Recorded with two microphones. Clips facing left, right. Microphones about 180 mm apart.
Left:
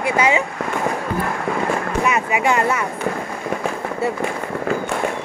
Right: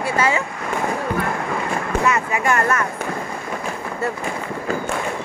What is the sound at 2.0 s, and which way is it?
Speech, 20° left (ahead or behind).